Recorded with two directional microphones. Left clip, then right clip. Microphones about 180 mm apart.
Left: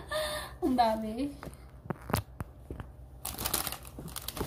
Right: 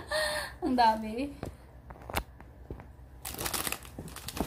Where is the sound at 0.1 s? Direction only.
15° right (ahead or behind).